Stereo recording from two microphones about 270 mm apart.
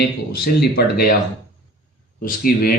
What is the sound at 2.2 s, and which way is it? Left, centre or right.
Speech, left.